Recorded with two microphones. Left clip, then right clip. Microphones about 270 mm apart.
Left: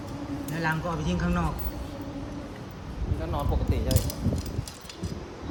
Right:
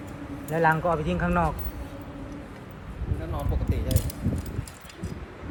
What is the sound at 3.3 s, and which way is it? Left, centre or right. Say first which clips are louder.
Speech: left 3 dB; centre.